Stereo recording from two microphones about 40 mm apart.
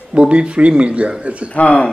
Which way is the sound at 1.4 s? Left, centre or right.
Left.